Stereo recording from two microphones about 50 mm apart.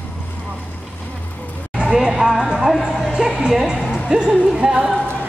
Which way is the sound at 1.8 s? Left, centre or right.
Centre.